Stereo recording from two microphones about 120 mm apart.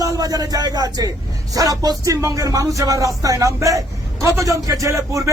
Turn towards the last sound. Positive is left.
turn(degrees=-25)  # may be behind; listen again after turning